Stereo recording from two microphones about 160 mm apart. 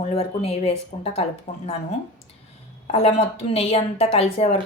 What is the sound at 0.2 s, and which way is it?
Speech, 40° left (ahead or behind).